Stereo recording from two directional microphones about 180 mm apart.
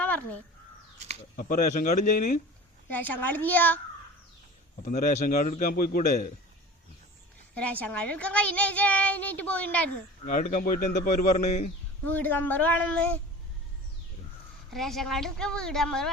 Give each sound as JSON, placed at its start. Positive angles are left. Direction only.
{"t": 0.9, "sound": "a sound", "side_deg": -35}
{"t": 1.4, "sound": "speech", "side_deg": 50}
{"t": 2.9, "sound": "a child's voice", "side_deg": 10}
{"t": 4.8, "sound": "speech", "side_deg": 45}
{"t": 7.5, "sound": "a child's voice", "side_deg": 5}
{"t": 10.2, "sound": "speech", "side_deg": 45}
{"t": 12.0, "sound": "a child's voice", "side_deg": 10}
{"t": 14.7, "sound": "a woman's voice", "side_deg": 0}